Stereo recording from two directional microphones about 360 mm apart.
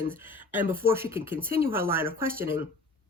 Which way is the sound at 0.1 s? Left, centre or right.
Centre.